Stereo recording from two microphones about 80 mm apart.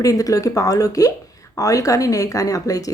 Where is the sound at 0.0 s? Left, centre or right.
Left.